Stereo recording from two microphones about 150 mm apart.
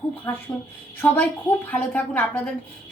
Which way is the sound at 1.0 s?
10° left (ahead or behind).